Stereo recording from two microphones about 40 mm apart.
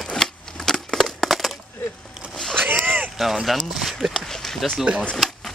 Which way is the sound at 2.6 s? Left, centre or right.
Right.